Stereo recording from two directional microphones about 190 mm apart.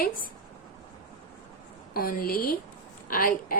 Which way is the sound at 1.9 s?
50° left (ahead or behind).